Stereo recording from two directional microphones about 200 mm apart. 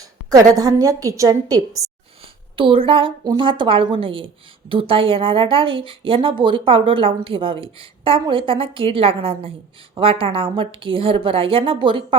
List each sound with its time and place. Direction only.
0.3 s a woman's voice: 20° right (ahead or behind)